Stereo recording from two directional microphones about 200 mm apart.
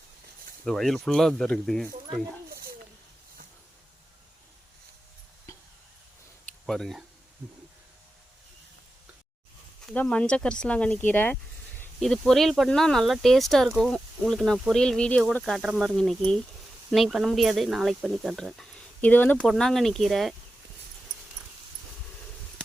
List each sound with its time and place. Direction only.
0.6 s speech: centre (ahead or behind)
2.5 s a sound: 50° right (ahead or behind)
6.7 s speech: centre (ahead or behind)
9.8 s speech: 5° left (ahead or behind)